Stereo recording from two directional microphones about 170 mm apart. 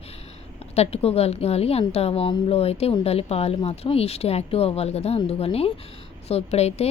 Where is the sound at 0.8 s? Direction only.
35° left (ahead or behind).